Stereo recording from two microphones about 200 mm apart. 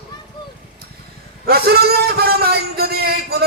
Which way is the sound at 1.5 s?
50° right (ahead or behind).